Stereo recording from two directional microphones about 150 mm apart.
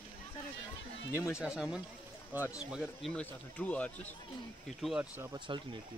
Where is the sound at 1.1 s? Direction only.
20° left (ahead or behind).